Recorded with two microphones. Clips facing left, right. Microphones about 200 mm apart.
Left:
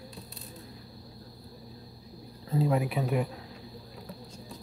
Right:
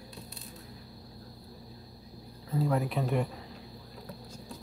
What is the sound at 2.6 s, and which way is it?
Speech, 15° left (ahead or behind).